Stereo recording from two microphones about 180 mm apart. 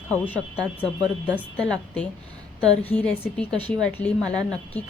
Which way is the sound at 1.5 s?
5° left (ahead or behind).